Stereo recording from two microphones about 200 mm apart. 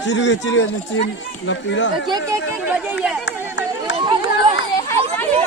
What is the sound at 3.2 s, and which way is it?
Run, 65° left (ahead or behind).